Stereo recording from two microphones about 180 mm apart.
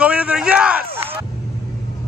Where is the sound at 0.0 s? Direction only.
5° right (ahead or behind).